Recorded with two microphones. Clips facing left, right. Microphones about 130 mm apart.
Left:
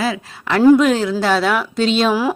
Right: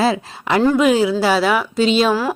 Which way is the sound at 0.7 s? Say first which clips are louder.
Even; 5° right (ahead or behind).